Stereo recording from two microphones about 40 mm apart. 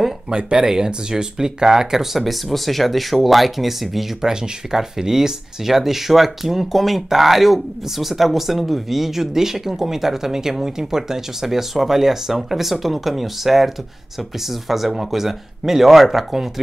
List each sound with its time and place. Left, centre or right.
0.3 s speech: right; by 16.4 s centre